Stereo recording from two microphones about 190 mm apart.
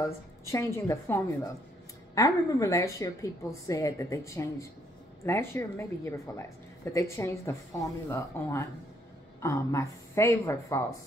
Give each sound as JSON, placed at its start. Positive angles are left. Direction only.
{"t": 0.5, "sound": "a woman's voice", "side_deg": 15}